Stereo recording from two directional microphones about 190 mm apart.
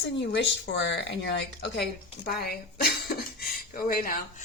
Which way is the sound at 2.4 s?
55° left (ahead or behind).